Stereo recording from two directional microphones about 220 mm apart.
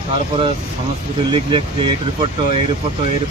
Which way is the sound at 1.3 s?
25° right (ahead or behind).